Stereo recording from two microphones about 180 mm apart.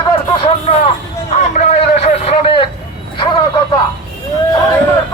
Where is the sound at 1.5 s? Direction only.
40° left (ahead or behind).